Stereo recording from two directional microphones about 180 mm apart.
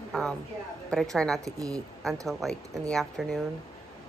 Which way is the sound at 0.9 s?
5° left (ahead or behind).